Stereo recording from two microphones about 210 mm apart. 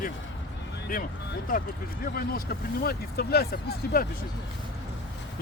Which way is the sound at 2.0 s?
45° left (ahead or behind).